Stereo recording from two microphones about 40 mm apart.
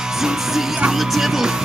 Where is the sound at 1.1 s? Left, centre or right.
Centre.